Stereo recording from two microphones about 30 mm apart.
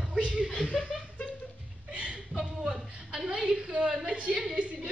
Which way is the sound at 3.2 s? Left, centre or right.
Centre.